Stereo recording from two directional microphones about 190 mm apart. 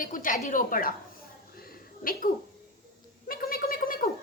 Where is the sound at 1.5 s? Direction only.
50° left (ahead or behind).